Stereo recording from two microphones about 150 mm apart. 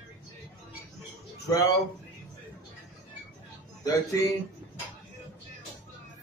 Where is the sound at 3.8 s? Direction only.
25° left (ahead or behind).